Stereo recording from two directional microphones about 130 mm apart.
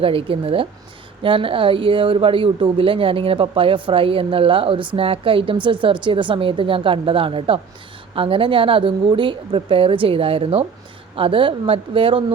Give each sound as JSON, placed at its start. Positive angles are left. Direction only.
{"t": 0.0, "sound": "speech", "side_deg": -45}